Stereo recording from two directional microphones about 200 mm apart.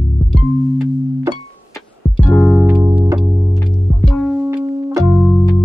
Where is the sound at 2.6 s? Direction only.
10° right (ahead or behind).